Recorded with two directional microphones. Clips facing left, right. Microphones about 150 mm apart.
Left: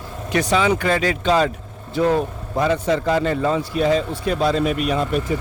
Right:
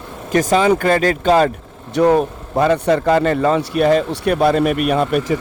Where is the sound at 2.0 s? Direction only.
70° right (ahead or behind).